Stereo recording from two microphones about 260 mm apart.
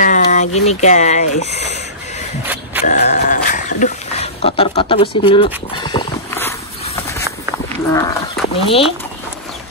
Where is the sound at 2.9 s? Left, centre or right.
Left.